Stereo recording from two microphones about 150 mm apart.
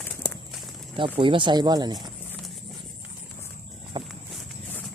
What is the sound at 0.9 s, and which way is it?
Speech, 35° right (ahead or behind).